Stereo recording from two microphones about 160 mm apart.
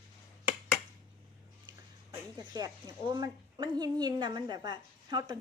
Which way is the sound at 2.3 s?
20° right (ahead or behind).